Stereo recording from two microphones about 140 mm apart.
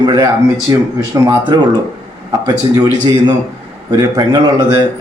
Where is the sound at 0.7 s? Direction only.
25° right (ahead or behind).